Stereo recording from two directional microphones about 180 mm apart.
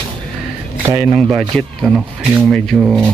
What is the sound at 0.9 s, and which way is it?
Speech, 15° right (ahead or behind).